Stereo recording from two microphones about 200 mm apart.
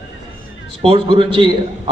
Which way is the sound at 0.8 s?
25° right (ahead or behind).